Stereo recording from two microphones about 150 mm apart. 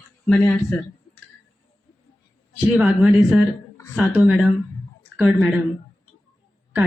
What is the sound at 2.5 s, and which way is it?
A woman's voice, 5° right (ahead or behind).